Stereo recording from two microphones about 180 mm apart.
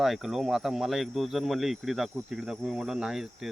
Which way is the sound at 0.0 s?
Centre (ahead or behind).